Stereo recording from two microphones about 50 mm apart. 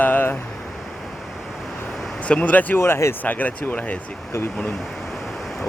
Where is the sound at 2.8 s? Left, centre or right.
Left.